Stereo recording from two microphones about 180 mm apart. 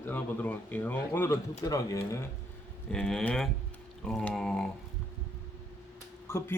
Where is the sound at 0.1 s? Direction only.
10° left (ahead or behind).